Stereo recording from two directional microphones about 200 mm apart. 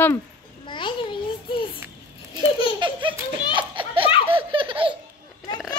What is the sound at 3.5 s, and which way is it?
Children playing, 25° right (ahead or behind).